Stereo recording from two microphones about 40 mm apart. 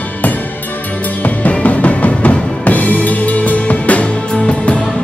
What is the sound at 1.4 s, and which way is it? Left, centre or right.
Music, left.